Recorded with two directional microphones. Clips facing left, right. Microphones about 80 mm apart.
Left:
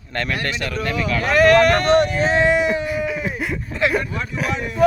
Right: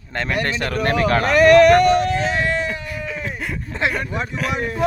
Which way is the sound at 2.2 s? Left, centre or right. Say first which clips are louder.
Left 5 dB; left.